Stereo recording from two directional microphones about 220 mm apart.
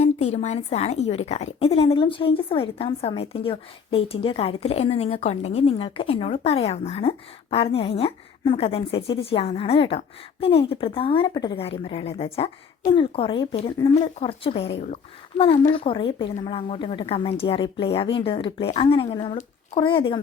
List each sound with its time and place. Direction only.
0.0 s a woman's voice: 30° left (ahead or behind)